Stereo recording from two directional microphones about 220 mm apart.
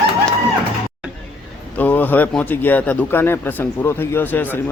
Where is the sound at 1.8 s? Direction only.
10° left (ahead or behind).